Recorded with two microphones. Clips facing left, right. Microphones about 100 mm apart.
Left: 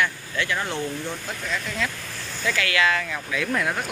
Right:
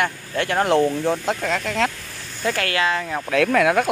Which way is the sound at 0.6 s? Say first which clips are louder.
Right 11 dB; 85° right.